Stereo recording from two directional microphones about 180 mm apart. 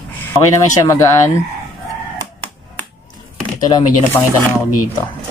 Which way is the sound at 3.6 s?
15° left (ahead or behind).